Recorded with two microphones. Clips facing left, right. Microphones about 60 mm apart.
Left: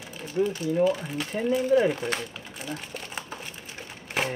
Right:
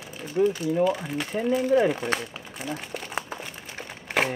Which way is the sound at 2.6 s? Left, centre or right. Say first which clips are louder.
Right 3 dB; right.